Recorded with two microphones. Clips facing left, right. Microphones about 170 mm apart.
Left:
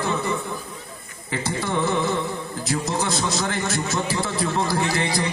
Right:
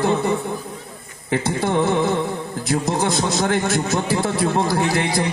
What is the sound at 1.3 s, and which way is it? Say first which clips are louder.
A man's voice: right 5 dB; 55° right (ahead or behind).